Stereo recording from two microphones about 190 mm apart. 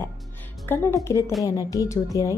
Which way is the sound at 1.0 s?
15° left (ahead or behind).